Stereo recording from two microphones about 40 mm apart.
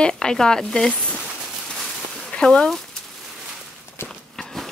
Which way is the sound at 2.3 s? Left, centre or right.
Left.